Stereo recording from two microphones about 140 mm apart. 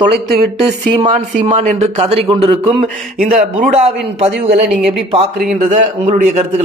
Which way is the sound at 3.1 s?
90° right.